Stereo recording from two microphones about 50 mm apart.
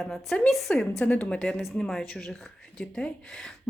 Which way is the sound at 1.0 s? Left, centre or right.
Left.